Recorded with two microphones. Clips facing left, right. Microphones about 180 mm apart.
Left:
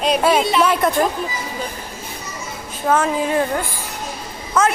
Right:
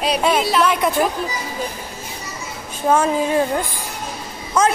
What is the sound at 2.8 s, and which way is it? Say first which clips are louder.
Speech: right 1 dB; 20° right (ahead or behind).